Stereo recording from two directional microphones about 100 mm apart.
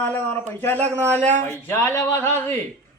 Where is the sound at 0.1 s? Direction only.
15° left (ahead or behind).